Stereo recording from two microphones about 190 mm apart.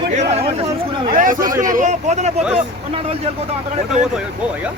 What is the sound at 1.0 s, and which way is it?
Speech, 45° right (ahead or behind).